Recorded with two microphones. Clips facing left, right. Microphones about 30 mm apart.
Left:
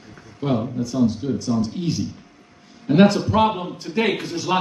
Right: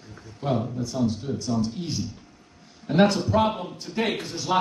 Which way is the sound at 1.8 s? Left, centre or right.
Centre.